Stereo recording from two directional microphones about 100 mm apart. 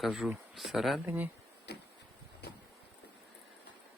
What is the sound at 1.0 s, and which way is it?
Speech, 20° right (ahead or behind).